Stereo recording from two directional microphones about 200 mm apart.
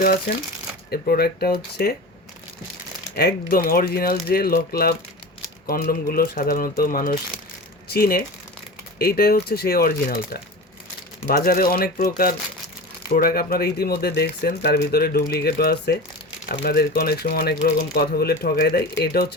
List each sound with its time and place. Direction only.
0.9 s speech: 50° left (ahead or behind)
3.2 s speech: 50° left (ahead or behind)
11.3 s speech: 50° left (ahead or behind)
13.1 s speech: 50° left (ahead or behind)